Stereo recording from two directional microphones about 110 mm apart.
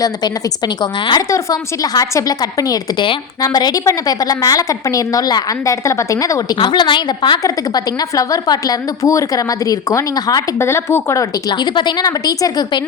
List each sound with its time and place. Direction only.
0.8 s a woman's voice: 40° left (ahead or behind)
6.6 s a woman's voice: 45° left (ahead or behind)
8.1 s a woman's voice: 30° left (ahead or behind)
11.6 s a woman's voice: 45° left (ahead or behind)